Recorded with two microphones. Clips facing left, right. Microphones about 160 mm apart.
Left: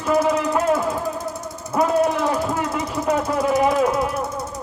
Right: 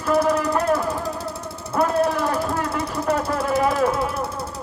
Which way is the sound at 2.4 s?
10° left (ahead or behind).